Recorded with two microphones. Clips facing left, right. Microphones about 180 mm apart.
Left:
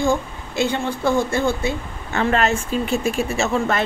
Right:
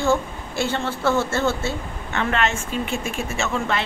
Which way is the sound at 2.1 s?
35° left (ahead or behind).